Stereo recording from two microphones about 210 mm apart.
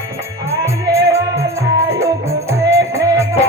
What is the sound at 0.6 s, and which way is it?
Music, 15° right (ahead or behind).